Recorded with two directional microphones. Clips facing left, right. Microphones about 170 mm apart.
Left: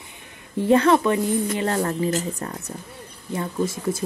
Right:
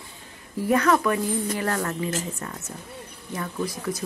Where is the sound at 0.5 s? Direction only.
25° left (ahead or behind).